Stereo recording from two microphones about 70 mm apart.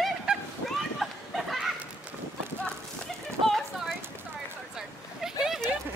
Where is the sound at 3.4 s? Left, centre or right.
Centre.